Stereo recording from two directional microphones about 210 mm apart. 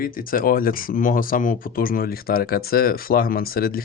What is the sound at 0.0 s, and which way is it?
Speech, 45° left (ahead or behind).